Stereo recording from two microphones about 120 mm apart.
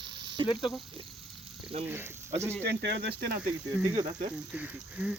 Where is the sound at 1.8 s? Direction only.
20° right (ahead or behind).